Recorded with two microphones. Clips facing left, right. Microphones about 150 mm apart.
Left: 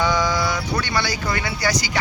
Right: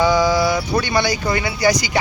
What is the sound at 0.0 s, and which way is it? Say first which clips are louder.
Speech: right 5 dB; 10° right (ahead or behind).